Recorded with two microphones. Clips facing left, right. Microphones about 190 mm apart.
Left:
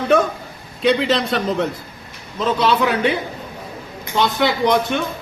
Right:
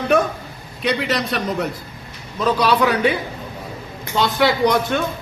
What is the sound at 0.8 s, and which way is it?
A man's voice, 25° left (ahead or behind).